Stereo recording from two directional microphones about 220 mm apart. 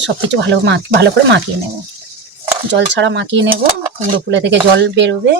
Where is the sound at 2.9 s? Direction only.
55° right (ahead or behind).